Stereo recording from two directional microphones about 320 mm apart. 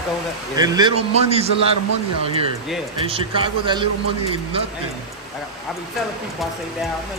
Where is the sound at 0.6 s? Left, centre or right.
Centre.